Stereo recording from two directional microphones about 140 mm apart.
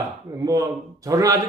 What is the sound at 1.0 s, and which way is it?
Speech, 25° right (ahead or behind).